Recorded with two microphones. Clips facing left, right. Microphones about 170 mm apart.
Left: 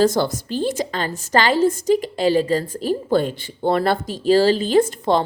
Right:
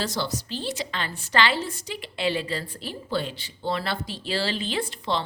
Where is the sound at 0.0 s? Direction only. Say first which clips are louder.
Left 11 dB; 50° left (ahead or behind).